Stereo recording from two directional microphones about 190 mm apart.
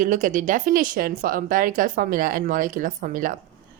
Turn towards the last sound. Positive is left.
turn(degrees=-45)  # may be behind; listen again after turning